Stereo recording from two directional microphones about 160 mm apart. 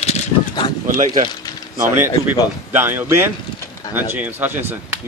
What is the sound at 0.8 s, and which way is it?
Speech, 55° right (ahead or behind).